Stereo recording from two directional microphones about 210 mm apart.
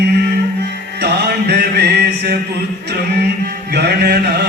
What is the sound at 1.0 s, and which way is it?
Music, 50° right (ahead or behind).